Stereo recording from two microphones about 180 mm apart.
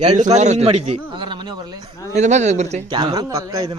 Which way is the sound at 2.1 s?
40° right (ahead or behind).